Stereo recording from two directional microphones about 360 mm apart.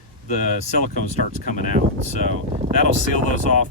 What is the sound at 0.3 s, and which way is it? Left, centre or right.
Speech, centre.